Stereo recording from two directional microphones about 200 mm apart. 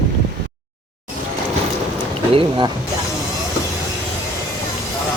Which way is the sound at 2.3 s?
25° right (ahead or behind).